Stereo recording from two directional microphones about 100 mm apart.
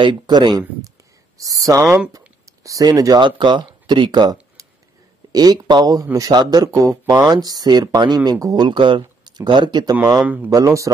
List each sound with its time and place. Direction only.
0.0 s speech: 50° right (ahead or behind)
1.4 s speech: 35° right (ahead or behind)
4.6 s a sound: 35° right (ahead or behind)
5.3 s speech: 40° right (ahead or behind)
8.6 s speech: 55° right (ahead or behind)
10.2 s speech: 15° right (ahead or behind)
10.5 s speech: 35° right (ahead or behind)